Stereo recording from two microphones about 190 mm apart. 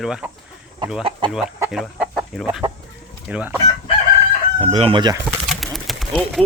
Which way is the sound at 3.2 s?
5° right (ahead or behind).